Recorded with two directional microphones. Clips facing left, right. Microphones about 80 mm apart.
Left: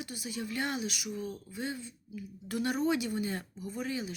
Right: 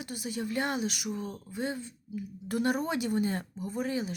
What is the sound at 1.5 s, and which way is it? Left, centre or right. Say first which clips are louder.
Speech: right 6 dB; right.